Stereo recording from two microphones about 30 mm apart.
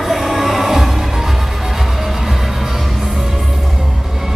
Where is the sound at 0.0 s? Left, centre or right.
Centre.